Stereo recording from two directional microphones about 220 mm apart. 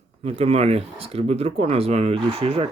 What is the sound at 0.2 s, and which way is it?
Speech, 25° right (ahead or behind).